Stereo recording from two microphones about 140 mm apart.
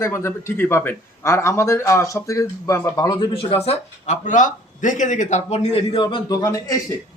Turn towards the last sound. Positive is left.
turn(degrees=20)  # may be behind; listen again after turning